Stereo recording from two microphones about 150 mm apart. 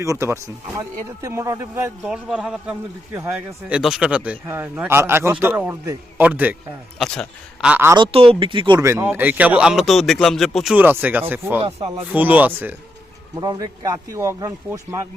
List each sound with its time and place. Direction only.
0.0 s speech: 20° right (ahead or behind)
2.0 s a man's voice: 5° right (ahead or behind)
7.0 s a man's voice: 5° left (ahead or behind)
7.6 s a man's voice: 10° right (ahead or behind)
7.9 s speech: 35° right (ahead or behind)
8.8 s a man's voice: 15° right (ahead or behind); by 10.8 s centre (ahead or behind)
10.8 s a man's voice: 10° right (ahead or behind)
13.3 s speech: 25° right (ahead or behind)